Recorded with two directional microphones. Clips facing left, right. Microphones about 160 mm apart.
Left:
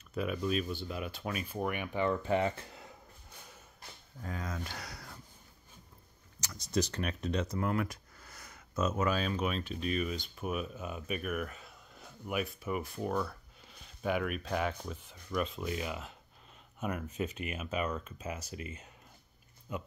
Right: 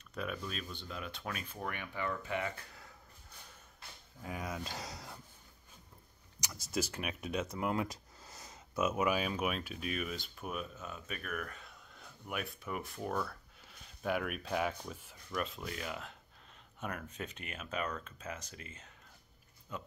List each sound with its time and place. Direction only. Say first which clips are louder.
0.1 s speech: left 8 dB; 5° left (ahead or behind)
2.0 s speech: left 7 dB; 30° left (ahead or behind)
4.2 s speech: left 1 dB; 10° right (ahead or behind)
6.4 s speech: left 4 dB; 5° right (ahead or behind); by 19.8 s 10° left (ahead or behind)